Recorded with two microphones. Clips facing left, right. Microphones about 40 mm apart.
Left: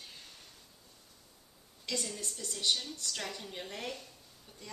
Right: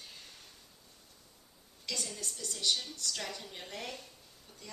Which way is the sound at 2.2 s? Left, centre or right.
Centre.